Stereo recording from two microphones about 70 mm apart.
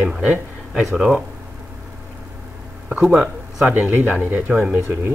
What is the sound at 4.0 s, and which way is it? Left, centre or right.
Speech, right.